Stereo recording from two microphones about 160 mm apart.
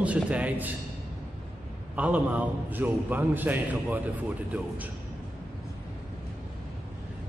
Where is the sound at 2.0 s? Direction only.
10° right (ahead or behind).